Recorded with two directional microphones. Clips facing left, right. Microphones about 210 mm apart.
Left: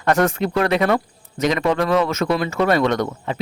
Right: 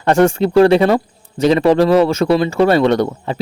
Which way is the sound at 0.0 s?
30° right (ahead or behind).